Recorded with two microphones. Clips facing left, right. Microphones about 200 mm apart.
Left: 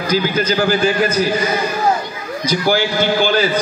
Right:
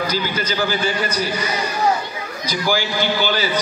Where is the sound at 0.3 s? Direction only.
45° left (ahead or behind).